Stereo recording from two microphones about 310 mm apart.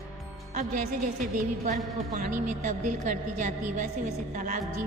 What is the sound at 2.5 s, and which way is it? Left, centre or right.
A woman's voice, right.